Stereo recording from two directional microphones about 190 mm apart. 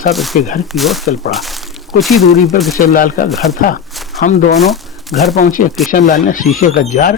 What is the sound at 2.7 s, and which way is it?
Speech, 50° left (ahead or behind).